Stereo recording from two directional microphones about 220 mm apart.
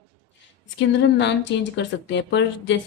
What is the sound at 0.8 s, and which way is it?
Speech, 50° left (ahead or behind).